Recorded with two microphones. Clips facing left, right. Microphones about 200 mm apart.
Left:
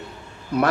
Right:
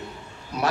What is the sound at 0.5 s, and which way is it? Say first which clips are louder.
Speech: left 7 dB; 55° left (ahead or behind).